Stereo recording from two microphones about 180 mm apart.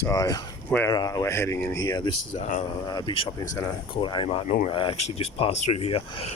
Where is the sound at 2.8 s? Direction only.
25° left (ahead or behind).